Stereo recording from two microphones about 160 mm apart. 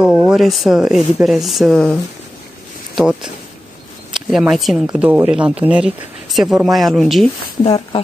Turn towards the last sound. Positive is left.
turn(degrees=30)  # may be behind; listen again after turning